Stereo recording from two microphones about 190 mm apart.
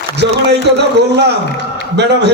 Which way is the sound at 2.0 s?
65° right (ahead or behind).